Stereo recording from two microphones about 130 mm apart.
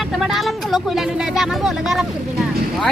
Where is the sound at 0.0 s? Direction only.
Centre (ahead or behind).